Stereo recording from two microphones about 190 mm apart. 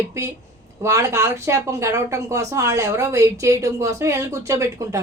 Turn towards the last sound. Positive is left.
turn(degrees=-15)  # may be behind; listen again after turning